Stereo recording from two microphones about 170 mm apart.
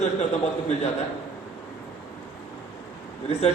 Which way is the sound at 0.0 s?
40° left (ahead or behind).